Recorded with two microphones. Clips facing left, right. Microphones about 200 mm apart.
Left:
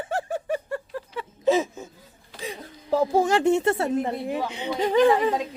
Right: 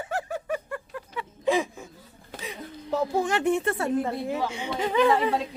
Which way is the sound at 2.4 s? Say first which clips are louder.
Left 2 dB; 45° left (ahead or behind).